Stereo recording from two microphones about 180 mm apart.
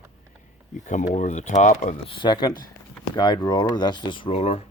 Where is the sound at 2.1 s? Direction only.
25° left (ahead or behind).